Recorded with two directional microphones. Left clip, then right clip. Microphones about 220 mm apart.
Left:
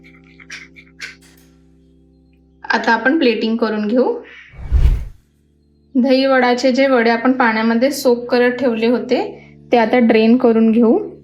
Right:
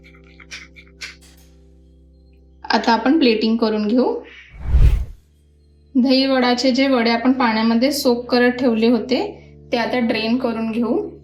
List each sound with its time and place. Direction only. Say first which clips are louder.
0.0 s music: left 2 dB; centre (ahead or behind)
2.6 s speech: left 2 dB; centre (ahead or behind)
5.9 s a woman's voice: left 3 dB; centre (ahead or behind)